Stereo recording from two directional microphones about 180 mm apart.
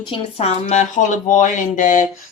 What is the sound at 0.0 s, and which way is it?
Speech, 30° left (ahead or behind).